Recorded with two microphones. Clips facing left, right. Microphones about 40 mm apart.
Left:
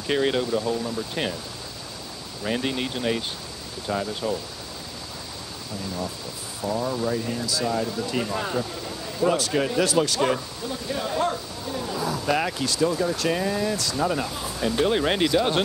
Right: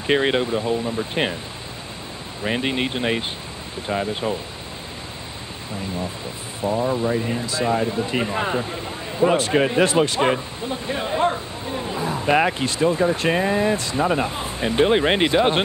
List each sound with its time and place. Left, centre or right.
0.0 s speech: right
2.4 s speech: right
6.6 s speech: right